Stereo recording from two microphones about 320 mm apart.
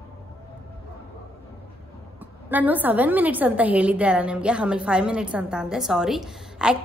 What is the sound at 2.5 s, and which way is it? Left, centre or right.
A woman's voice, centre.